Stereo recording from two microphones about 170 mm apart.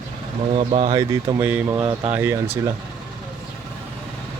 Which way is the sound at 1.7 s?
25° right (ahead or behind).